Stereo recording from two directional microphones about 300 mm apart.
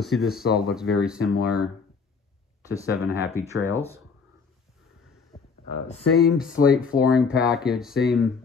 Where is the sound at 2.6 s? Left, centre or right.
Centre.